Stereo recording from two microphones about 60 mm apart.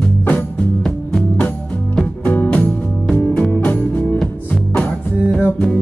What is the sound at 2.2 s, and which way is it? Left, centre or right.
Music, left.